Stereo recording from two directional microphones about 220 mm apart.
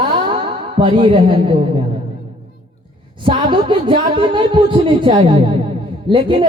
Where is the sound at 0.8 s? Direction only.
20° right (ahead or behind).